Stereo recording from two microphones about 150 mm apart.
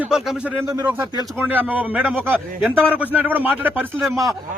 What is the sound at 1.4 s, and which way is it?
Speech, 10° right (ahead or behind).